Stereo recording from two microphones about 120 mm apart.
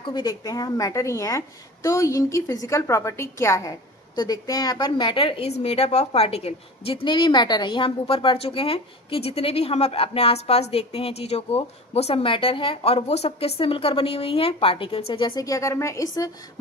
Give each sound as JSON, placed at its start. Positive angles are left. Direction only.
{"t": 0.1, "sound": "a woman's voice", "side_deg": 30}
{"t": 15.4, "sound": "a woman's voice", "side_deg": 25}